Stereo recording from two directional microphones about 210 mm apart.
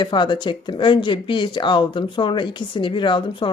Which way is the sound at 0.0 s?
20° left (ahead or behind).